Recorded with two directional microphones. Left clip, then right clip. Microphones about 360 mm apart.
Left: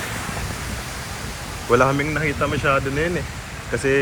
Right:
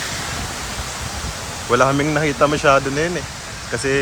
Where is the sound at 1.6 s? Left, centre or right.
Centre.